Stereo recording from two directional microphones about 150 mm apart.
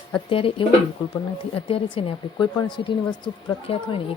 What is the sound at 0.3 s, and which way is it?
A woman's voice, 35° left (ahead or behind).